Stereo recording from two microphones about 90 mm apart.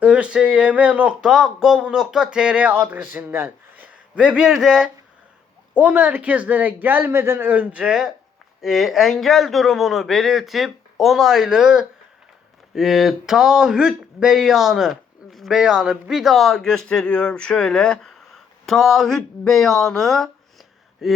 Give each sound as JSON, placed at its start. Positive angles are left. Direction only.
{"t": 0.0, "sound": "speech", "side_deg": -15}